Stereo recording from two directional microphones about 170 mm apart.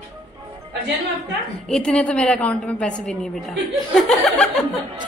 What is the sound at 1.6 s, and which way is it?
A woman's voice, 5° left (ahead or behind).